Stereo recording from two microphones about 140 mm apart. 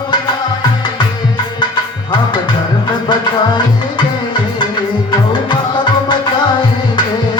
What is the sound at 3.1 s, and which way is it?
Music, 30° left (ahead or behind).